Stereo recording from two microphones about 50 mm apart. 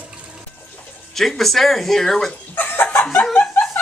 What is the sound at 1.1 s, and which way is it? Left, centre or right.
Speech, centre.